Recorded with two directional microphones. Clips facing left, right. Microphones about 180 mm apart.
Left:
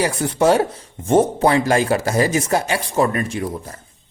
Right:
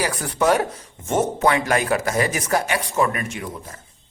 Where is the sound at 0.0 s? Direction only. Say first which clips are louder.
Left 4 dB; 25° left (ahead or behind).